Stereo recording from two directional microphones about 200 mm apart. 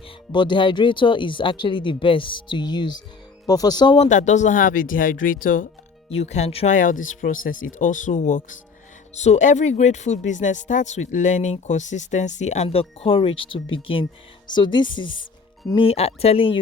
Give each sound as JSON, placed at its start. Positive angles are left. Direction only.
{"t": 0.3, "sound": "speech", "side_deg": 20}
{"t": 6.1, "sound": "speech", "side_deg": 35}